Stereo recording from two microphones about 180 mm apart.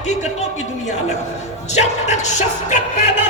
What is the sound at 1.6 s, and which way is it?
A man's voice, 40° left (ahead or behind).